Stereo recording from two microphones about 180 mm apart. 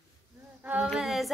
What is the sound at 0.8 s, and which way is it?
Speech, centre (ahead or behind).